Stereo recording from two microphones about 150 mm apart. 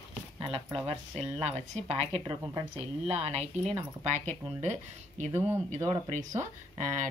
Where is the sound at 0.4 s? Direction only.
40° right (ahead or behind).